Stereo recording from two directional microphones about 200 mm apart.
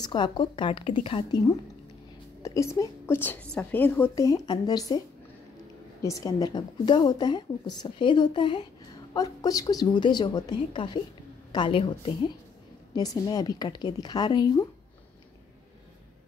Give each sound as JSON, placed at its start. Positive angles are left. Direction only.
{"t": 0.0, "sound": "a woman's voice", "side_deg": 20}
{"t": 2.4, "sound": "a woman's voice", "side_deg": 15}
{"t": 6.0, "sound": "a woman's voice", "side_deg": 20}